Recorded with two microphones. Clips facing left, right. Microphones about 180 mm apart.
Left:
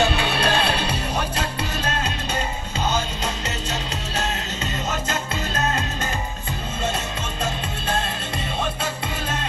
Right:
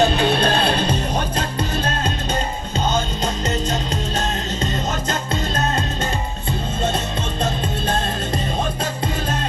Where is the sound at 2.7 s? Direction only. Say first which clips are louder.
Right 3 dB; 35° right (ahead or behind).